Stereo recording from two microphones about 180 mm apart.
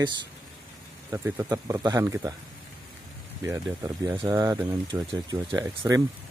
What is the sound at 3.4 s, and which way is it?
Speech, 15° right (ahead or behind).